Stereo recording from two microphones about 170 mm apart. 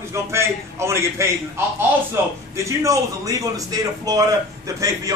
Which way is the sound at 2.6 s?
20° right (ahead or behind).